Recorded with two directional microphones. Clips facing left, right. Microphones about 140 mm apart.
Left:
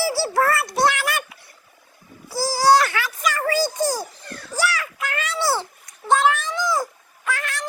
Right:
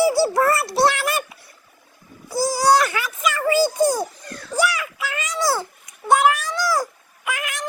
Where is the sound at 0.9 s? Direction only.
25° right (ahead or behind).